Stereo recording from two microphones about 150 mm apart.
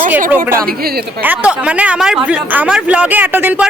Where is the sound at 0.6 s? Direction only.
90° right.